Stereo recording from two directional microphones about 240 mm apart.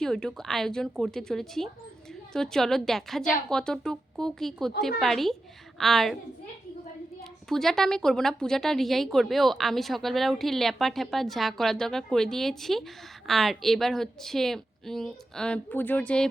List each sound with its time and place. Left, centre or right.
0.0 s a woman's voice: centre
7.5 s a woman's voice: centre